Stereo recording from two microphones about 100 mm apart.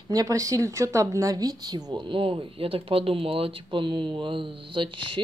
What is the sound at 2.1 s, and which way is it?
Speech, 65° right (ahead or behind).